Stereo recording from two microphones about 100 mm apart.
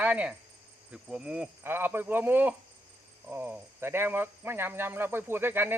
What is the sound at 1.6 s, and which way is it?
Speech, 20° right (ahead or behind).